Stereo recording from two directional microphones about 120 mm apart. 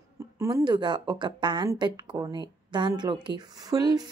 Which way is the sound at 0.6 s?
40° right (ahead or behind).